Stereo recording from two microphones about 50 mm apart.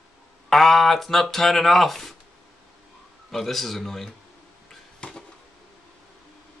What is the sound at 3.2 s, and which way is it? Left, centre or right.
Speech, centre.